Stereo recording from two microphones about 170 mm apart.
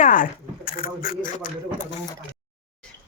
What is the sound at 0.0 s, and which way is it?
Speech, 50° left (ahead or behind).